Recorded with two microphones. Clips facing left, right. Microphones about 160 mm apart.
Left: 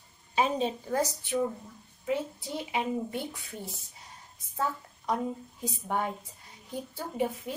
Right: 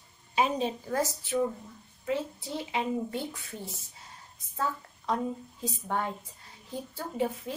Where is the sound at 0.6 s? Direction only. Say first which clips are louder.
Left 1 dB; 25° left (ahead or behind).